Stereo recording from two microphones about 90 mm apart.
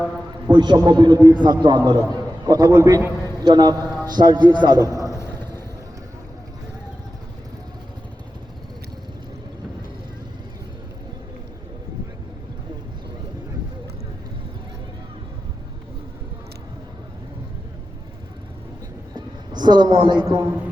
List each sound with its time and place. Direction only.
0.5 s a man's voice: 55° right (ahead or behind)
3.4 s a man's voice: 55° right (ahead or behind)
4.8 s a man's voice: 40° right (ahead or behind)
5.0 s vehicle: 35° left (ahead or behind)
19.1 s a sound: 55° right (ahead or behind)
20.0 s a man's voice: 60° right (ahead or behind)
20.2 s a man's voice: 35° right (ahead or behind)